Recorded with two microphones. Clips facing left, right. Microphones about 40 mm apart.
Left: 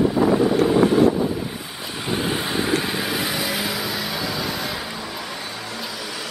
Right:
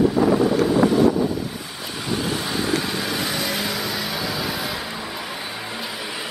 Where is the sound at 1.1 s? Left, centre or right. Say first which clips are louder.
Right 1 dB; centre.